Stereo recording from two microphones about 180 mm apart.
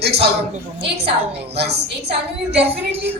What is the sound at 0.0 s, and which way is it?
Speech, 35° right (ahead or behind).